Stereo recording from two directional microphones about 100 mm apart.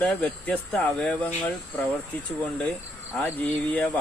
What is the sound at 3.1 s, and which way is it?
Speech, 20° left (ahead or behind).